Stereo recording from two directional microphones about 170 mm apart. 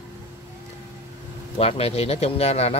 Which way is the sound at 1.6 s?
35° left (ahead or behind).